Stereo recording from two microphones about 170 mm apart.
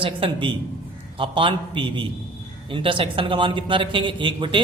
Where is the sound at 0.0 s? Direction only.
30° right (ahead or behind).